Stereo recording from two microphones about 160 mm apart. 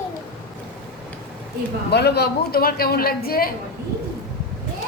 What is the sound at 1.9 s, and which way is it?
A man's voice, 90° left.